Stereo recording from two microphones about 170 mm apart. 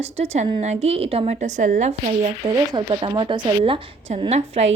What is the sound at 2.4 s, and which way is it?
A woman's voice, 30° right (ahead or behind).